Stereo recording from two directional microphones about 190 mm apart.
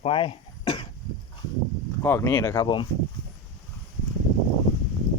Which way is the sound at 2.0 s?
15° left (ahead or behind).